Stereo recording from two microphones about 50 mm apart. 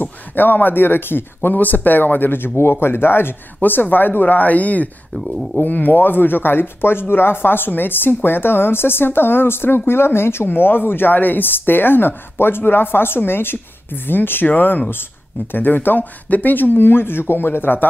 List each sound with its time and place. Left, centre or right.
0.0 s speech: left
5.1 s speech: centre
5.6 s speech: left